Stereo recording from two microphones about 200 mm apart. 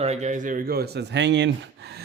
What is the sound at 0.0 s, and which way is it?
Speech, 35° right (ahead or behind).